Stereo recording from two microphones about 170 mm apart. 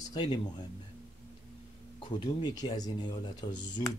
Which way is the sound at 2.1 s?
25° left (ahead or behind).